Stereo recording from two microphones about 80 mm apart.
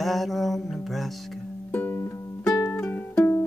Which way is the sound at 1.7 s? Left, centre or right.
Left.